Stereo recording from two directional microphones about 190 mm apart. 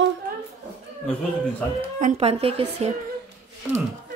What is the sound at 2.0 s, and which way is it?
Speech, 30° right (ahead or behind).